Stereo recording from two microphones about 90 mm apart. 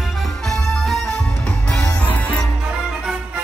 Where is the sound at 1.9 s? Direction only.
15° left (ahead or behind).